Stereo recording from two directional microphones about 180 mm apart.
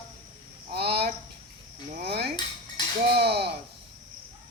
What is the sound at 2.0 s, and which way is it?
Cutlery, 65° right (ahead or behind).